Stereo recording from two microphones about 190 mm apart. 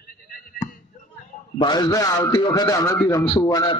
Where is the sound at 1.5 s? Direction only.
25° left (ahead or behind).